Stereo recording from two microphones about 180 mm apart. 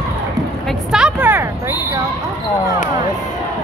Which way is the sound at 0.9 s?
5° right (ahead or behind).